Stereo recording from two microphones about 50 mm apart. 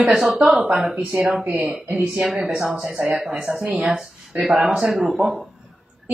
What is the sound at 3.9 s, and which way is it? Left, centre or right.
Speech, centre.